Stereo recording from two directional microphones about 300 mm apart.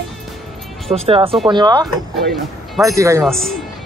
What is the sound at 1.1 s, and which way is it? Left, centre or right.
A man's voice, centre.